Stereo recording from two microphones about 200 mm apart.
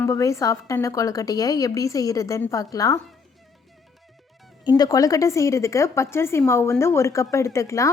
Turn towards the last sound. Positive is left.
turn(degrees=15)  # may be behind; listen again after turning